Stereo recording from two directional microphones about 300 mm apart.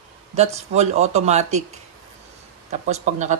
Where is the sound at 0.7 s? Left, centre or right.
Right.